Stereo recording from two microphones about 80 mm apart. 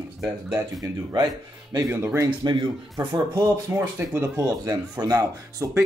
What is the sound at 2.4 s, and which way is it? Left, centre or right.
Speech, right.